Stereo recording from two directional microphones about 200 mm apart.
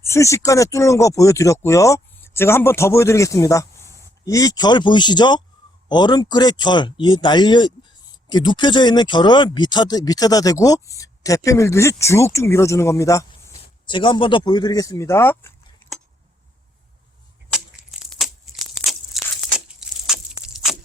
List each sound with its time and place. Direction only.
0.0 s speech: 15° left (ahead or behind)
15.8 s a sound: 10° left (ahead or behind)
18.0 s crushing: centre (ahead or behind)
19.5 s crumpling: 5° right (ahead or behind)
20.4 s crushing: centre (ahead or behind)